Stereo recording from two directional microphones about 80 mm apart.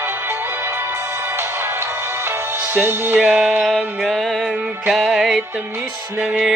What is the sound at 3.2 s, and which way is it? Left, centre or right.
Music, centre.